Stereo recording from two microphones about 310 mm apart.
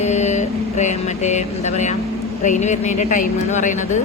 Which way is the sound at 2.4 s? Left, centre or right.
Left.